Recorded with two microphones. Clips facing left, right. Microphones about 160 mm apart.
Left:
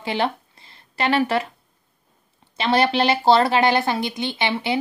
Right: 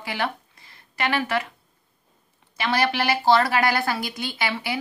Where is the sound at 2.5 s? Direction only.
25° left (ahead or behind).